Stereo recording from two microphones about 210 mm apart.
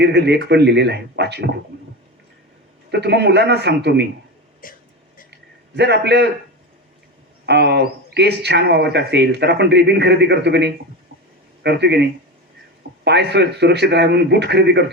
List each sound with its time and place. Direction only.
0.0 s speech: 55° right (ahead or behind)
2.9 s speech: 55° right (ahead or behind)
4.6 s speech: 40° left (ahead or behind)
5.3 s a sound: 55° right (ahead or behind)
7.4 s speech: 50° right (ahead or behind)
13.1 s speech: 55° right (ahead or behind)